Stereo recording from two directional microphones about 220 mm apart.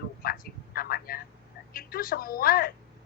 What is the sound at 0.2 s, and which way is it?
Vehicle, 40° left (ahead or behind).